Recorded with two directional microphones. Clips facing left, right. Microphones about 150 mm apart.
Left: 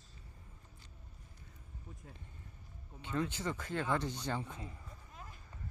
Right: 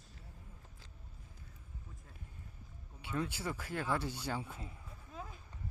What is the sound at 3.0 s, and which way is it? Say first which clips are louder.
Speech: left 2 dB; 10° right (ahead or behind).